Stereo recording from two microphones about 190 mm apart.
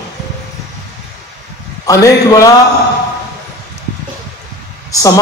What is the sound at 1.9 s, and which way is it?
Speech, 15° left (ahead or behind).